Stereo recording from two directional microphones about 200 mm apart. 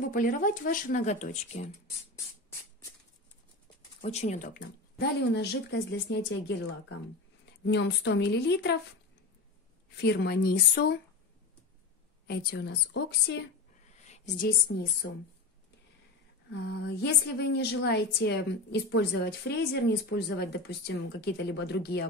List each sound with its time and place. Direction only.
0.1 s speech: 40° left (ahead or behind)
4.0 s a woman's voice: 35° left (ahead or behind); by 8.7 s 55° left (ahead or behind)
9.9 s speech: 55° left (ahead or behind)
12.3 s a woman's voice: 55° left (ahead or behind)
13.9 s a sound: 35° left (ahead or behind)
14.7 s a woman's voice: 60° left (ahead or behind)
16.6 s a woman's voice: 55° left (ahead or behind)